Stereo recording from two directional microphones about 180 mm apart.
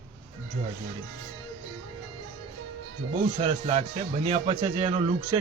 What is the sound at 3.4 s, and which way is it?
Speech, 35° right (ahead or behind).